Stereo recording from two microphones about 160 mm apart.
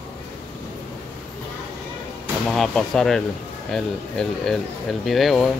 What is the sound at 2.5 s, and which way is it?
Speech, 5° left (ahead or behind).